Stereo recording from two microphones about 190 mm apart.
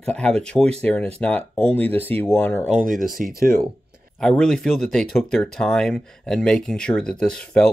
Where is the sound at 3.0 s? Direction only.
45° right (ahead or behind).